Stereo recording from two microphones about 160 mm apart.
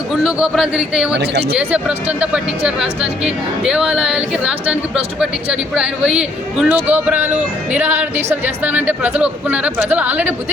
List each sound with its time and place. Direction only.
0.1 s speech: 5° right (ahead or behind)
1.2 s speech: 90° right
1.5 s a woman's voice: 10° right (ahead or behind)